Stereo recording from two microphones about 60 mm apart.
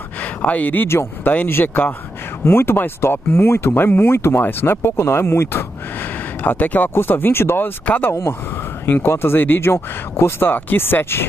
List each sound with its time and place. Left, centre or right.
0.2 s speech: left
0.8 s speech: left
6.4 s speech: left
7.8 s speech: left
8.1 s speech: left
8.8 s speech: left